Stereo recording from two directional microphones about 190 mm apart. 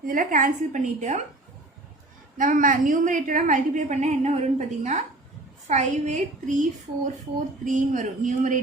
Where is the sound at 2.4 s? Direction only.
45° right (ahead or behind).